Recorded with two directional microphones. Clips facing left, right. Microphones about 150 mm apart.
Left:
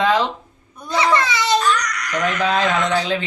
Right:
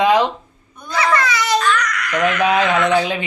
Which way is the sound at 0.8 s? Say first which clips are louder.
Even; 25° left (ahead or behind).